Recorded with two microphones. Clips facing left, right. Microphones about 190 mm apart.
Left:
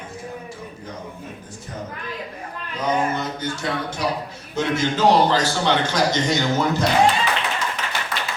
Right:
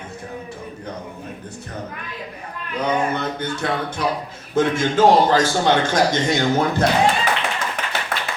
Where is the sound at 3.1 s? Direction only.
60° right (ahead or behind).